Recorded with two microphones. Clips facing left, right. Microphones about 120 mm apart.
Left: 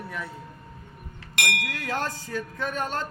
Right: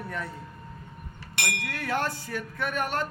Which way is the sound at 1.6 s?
15° left (ahead or behind).